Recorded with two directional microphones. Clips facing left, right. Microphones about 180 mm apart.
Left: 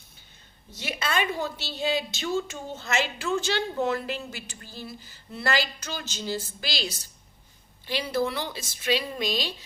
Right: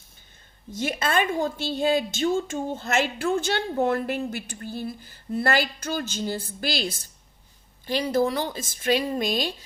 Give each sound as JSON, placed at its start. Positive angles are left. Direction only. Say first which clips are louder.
{"t": 0.7, "sound": "a woman's voice", "louder": "right 5 dB", "side_deg": -50}